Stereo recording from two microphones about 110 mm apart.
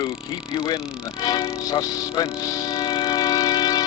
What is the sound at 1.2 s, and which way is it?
Music, 35° left (ahead or behind).